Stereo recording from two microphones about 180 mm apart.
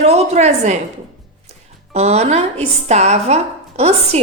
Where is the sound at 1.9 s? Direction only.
40° right (ahead or behind).